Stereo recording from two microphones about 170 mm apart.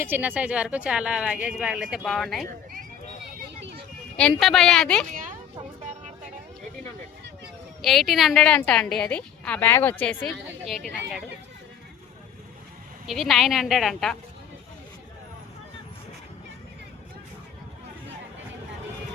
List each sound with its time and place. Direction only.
0.0 s a woman's voice: 10° right (ahead or behind)
4.2 s a woman's voice: 5° left (ahead or behind)
5.1 s a sound: 50° right (ahead or behind)
7.8 s a woman's voice: centre (ahead or behind)
13.1 s a woman's voice: centre (ahead or behind)